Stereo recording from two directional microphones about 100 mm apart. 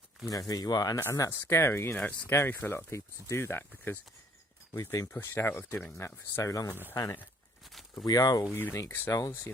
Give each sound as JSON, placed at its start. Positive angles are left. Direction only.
{"t": 0.3, "sound": "speech", "side_deg": 40}
{"t": 5.1, "sound": "speech", "side_deg": 20}
{"t": 7.7, "sound": "a sound", "side_deg": 0}
{"t": 8.0, "sound": "speech", "side_deg": 40}
{"t": 8.5, "sound": "speech", "side_deg": 20}